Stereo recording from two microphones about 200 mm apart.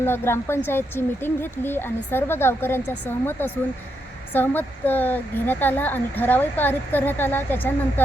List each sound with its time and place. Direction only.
0.0 s speech: 10° left (ahead or behind)